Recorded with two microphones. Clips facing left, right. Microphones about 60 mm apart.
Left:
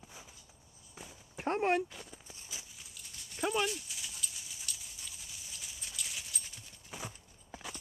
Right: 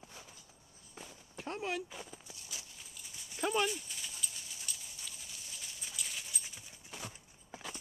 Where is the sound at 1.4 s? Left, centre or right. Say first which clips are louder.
Left 8 dB; left.